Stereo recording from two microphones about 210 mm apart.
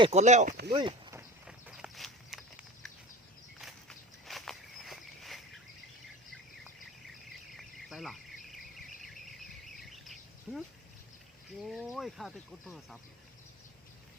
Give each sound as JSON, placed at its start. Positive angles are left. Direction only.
{"t": 0.0, "sound": "speech", "side_deg": -30}
{"t": 0.7, "sound": "a sound", "side_deg": -20}
{"t": 1.5, "sound": "walk", "side_deg": -5}
{"t": 7.5, "sound": "a sound", "side_deg": 0}
{"t": 8.4, "sound": "insect", "side_deg": 0}
{"t": 11.7, "sound": "speech", "side_deg": 0}